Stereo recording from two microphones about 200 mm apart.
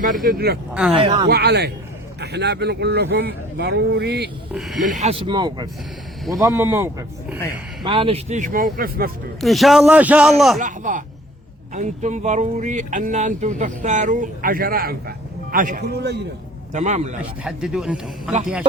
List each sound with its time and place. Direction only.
0.0 s speech: 45° right (ahead or behind)
0.7 s a man's voice: 5° right (ahead or behind)
0.9 s speech: 25° right (ahead or behind)
1.3 s speech: 55° right (ahead or behind)
4.5 s a man's voice: centre (ahead or behind)
4.9 s speech: 30° right (ahead or behind); by 7.3 s 10° right (ahead or behind)
7.9 s speech: 30° right (ahead or behind); by 9.1 s 45° right (ahead or behind)
9.4 s a man's voice: centre (ahead or behind)
10.6 s speech: 40° right (ahead or behind)
16.7 s speech: 35° right (ahead or behind)
17.4 s a man's voice: 5° right (ahead or behind)